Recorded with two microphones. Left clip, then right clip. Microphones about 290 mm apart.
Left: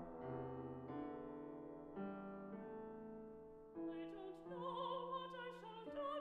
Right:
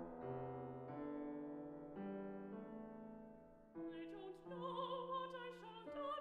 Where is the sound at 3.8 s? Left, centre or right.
Right.